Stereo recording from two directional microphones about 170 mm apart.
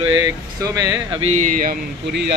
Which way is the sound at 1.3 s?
45° right (ahead or behind).